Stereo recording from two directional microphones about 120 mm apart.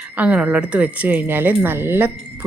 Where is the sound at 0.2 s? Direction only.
10° right (ahead or behind).